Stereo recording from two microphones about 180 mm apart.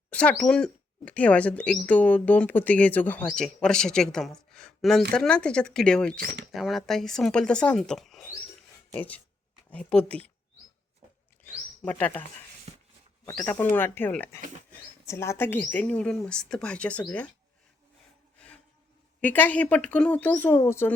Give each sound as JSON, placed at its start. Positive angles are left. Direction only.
{"t": 0.1, "sound": "speech", "side_deg": 5}
{"t": 6.1, "sound": "speech", "side_deg": -55}
{"t": 6.5, "sound": "speech", "side_deg": 0}
{"t": 11.4, "sound": "bird", "side_deg": 10}
{"t": 13.2, "sound": "speech", "side_deg": 15}
{"t": 18.3, "sound": "a sound", "side_deg": 5}
{"t": 19.2, "sound": "speech", "side_deg": 10}